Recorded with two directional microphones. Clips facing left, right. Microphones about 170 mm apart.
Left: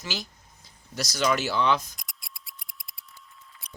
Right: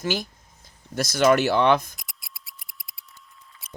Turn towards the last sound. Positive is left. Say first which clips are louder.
# right 6 dB
turn(degrees=0)  # may be behind; listen again after turning